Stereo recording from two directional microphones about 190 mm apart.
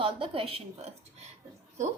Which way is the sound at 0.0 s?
30° right (ahead or behind).